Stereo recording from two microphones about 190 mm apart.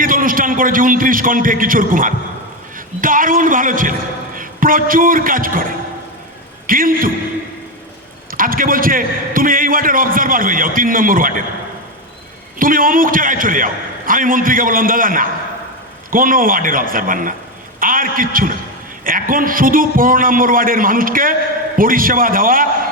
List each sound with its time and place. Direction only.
0.0 s a man's voice: 45° right (ahead or behind)
6.7 s a man's voice: 50° right (ahead or behind)
8.3 s a man's voice: 50° right (ahead or behind)
12.5 s a man's voice: 45° right (ahead or behind)